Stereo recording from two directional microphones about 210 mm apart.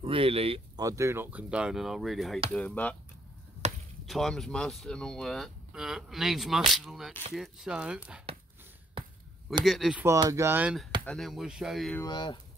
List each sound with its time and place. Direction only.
0.0 s speech: 25° right (ahead or behind)
0.8 s speech: 15° right (ahead or behind); by 3.0 s 5° left (ahead or behind)
4.0 s speech: centre (ahead or behind)
9.7 s speech: centre (ahead or behind)
10.0 s speech: 15° right (ahead or behind)
12.0 s speech: 20° left (ahead or behind)